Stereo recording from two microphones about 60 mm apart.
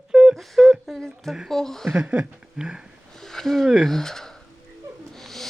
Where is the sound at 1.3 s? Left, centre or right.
Centre.